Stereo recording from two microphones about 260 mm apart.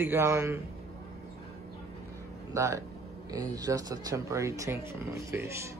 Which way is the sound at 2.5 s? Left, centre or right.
Centre.